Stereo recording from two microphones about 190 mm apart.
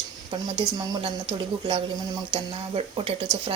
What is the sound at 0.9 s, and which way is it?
Speech, 25° right (ahead or behind).